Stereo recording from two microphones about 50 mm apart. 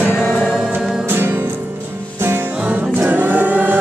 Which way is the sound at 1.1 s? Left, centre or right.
Right.